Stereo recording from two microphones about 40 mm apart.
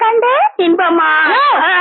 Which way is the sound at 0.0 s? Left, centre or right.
Centre.